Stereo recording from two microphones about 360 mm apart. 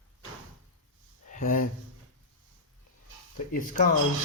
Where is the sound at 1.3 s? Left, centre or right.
Left.